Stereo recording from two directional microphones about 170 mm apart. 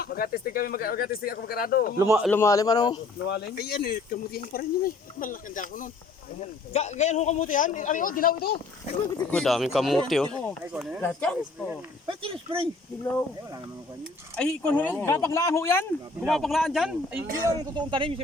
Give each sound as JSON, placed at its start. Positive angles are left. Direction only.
{"t": 0.0, "sound": "speech", "side_deg": 60}
{"t": 2.0, "sound": "speech", "side_deg": -15}
{"t": 2.3, "sound": "a man's voice", "side_deg": 15}
{"t": 3.2, "sound": "a man's voice", "side_deg": 75}
{"t": 9.1, "sound": "speech", "side_deg": 5}
{"t": 11.0, "sound": "speech", "side_deg": 10}
{"t": 12.0, "sound": "speech", "side_deg": -30}
{"t": 14.3, "sound": "speech", "side_deg": 5}
{"t": 16.2, "sound": "speech", "side_deg": 0}
{"t": 17.7, "sound": "speech", "side_deg": -30}